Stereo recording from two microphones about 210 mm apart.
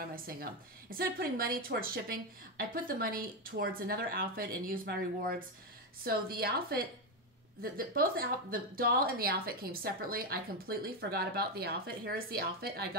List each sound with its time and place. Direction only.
0.1 s a woman's voice: 45° right (ahead or behind)